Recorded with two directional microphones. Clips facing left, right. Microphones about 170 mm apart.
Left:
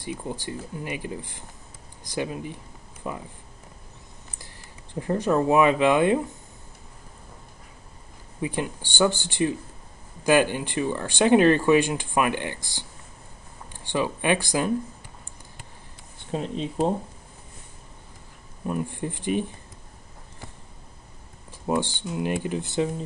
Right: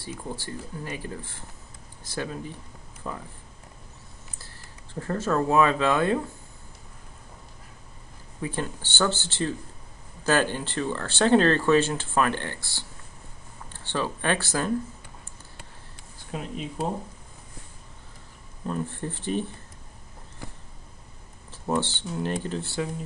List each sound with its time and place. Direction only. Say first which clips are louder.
0.0 s speech: left 3 dB; 15° left (ahead or behind)
4.4 s speech: left 2 dB; 15° left (ahead or behind)
8.4 s speech: left 3 dB; 15° left (ahead or behind)
16.2 s speech: left 5 dB; 30° left (ahead or behind)
18.7 s speech: left 2 dB; 15° left (ahead or behind)
21.5 s speech: left 1 dB; 15° left (ahead or behind)